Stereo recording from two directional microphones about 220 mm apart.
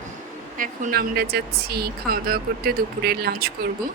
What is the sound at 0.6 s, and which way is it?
A woman's voice, 40° right (ahead or behind).